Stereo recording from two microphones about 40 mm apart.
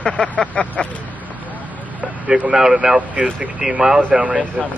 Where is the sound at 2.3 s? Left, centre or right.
Right.